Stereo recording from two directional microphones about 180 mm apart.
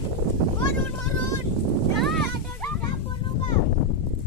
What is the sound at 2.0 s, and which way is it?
Music, centre (ahead or behind).